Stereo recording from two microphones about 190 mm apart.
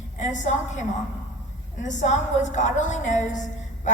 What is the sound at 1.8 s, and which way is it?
A woman's voice, 40° left (ahead or behind).